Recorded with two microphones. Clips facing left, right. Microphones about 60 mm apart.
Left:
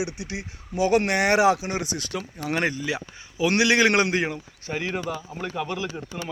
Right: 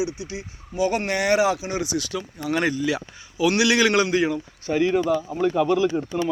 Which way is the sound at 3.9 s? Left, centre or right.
Left.